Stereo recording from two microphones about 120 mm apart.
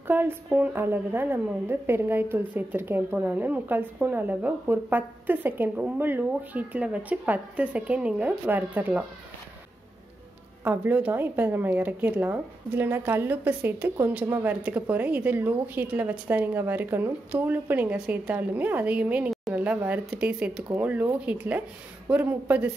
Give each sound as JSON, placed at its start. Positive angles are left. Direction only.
{"t": 0.0, "sound": "speech", "side_deg": -20}
{"t": 10.6, "sound": "speech", "side_deg": -15}